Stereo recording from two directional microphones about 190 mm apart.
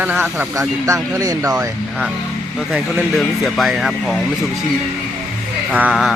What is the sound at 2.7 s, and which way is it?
Speech, centre (ahead or behind).